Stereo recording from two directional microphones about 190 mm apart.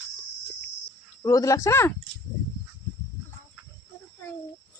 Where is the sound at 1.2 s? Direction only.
20° left (ahead or behind).